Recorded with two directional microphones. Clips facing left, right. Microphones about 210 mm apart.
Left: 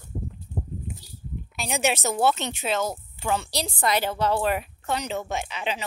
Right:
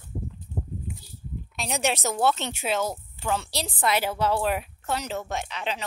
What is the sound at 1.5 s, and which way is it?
Speech, centre (ahead or behind).